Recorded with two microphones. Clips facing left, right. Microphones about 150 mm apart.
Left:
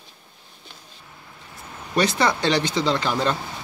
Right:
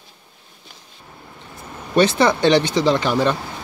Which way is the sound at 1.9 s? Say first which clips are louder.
Right 5 dB; 20° right (ahead or behind).